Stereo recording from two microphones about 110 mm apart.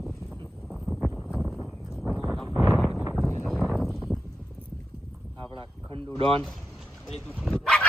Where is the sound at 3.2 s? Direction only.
20° left (ahead or behind).